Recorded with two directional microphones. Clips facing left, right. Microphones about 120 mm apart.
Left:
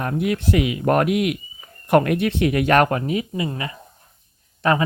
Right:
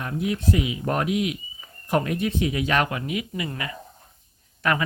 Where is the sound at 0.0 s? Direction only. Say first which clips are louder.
Left 4 dB; 60° left (ahead or behind).